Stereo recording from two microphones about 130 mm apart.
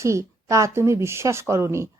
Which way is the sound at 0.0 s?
25° right (ahead or behind).